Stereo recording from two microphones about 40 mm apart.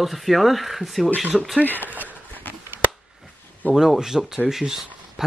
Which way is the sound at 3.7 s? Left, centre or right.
Centre.